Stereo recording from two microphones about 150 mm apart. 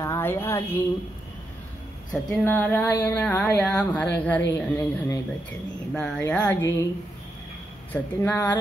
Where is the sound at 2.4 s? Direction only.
10° left (ahead or behind).